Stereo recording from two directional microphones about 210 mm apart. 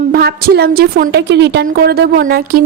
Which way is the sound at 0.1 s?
45° right (ahead or behind).